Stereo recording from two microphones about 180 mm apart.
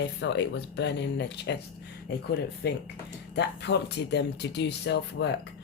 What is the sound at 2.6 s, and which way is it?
Speech, 60° left (ahead or behind).